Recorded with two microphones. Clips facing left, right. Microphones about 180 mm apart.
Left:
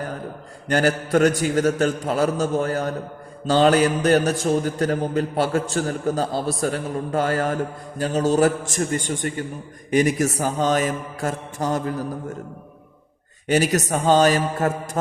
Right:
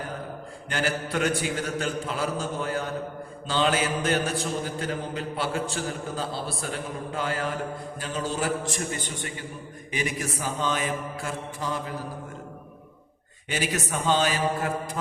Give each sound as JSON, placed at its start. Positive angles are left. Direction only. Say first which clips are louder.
{"t": 0.7, "sound": "mantra", "louder": "left 9 dB", "side_deg": 40}
{"t": 9.9, "sound": "a man's voice", "louder": "left 11 dB", "side_deg": 45}
{"t": 13.5, "sound": "mantra", "louder": "left 9 dB", "side_deg": 40}